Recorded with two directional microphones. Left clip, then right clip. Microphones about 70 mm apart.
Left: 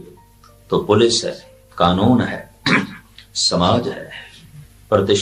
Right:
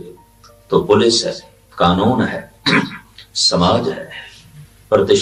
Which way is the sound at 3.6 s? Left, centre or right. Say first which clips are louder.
Right 2 dB; left.